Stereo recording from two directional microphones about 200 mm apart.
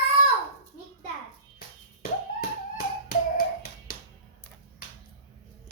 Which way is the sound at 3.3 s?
50° left (ahead or behind).